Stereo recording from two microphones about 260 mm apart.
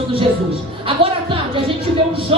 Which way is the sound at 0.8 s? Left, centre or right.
Right.